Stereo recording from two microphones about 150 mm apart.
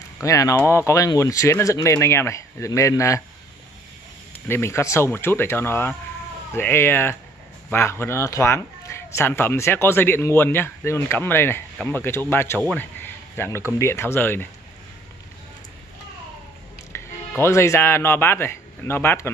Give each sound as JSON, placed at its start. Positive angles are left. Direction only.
{"t": 0.2, "sound": "speech", "side_deg": 20}
{"t": 4.5, "sound": "speech", "side_deg": 15}
{"t": 16.9, "sound": "speech", "side_deg": 15}